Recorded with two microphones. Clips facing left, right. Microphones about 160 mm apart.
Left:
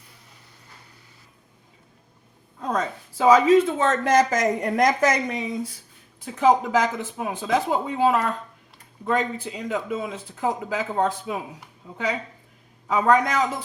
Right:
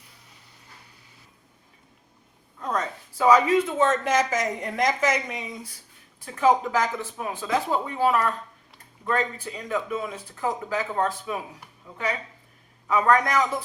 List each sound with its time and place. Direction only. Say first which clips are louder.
2.6 s speech: left 2 dB; 20° left (ahead or behind)
4.1 s a woman's voice: left 4 dB; 40° left (ahead or behind)
6.1 s speech: left 2 dB; 20° left (ahead or behind)
12.9 s speech: left 1 dB; 20° left (ahead or behind)